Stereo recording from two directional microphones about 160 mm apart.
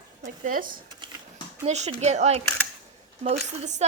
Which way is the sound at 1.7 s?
45° right (ahead or behind).